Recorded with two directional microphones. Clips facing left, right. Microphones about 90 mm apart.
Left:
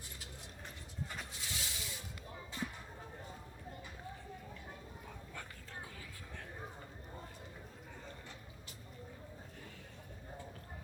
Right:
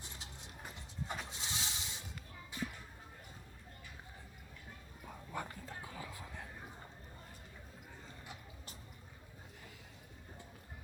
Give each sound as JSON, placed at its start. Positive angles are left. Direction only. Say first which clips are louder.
{"t": 1.0, "sound": "vehicle", "louder": "right 3 dB", "side_deg": -25}
{"t": 5.0, "sound": "whispering", "louder": "right 10 dB", "side_deg": -20}